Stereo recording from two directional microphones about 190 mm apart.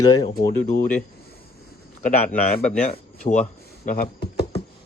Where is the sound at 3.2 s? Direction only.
40° left (ahead or behind).